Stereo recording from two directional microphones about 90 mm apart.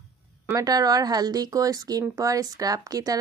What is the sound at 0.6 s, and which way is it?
A woman's voice, 45° right (ahead or behind).